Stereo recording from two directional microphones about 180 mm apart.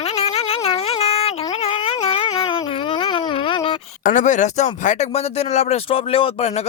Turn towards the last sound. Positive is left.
turn(degrees=35)  # may be behind; listen again after turning